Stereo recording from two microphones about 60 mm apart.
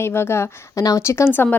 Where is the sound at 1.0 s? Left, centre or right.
Left.